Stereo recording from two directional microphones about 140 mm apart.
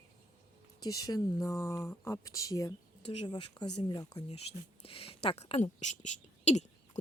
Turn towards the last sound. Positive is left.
turn(degrees=55)  # may be behind; listen again after turning